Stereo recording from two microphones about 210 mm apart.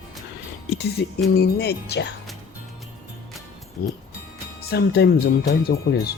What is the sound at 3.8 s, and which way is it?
Speech, 45° left (ahead or behind).